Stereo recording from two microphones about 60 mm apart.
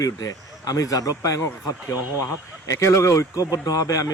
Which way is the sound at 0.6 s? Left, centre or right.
Left.